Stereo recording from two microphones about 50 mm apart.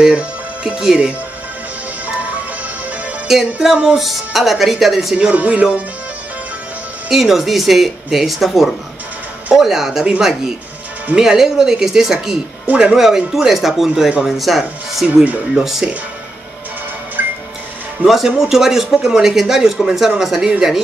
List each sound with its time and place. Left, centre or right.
0.0 s music: centre
0.7 s speech: centre
3.6 s speech: centre
5.3 s speech: right
7.1 s speech: centre
11.1 s speech: centre
12.6 s speech: right
12.9 s speech: centre
15.0 s speech: centre
17.2 s music: right
18.0 s speech: centre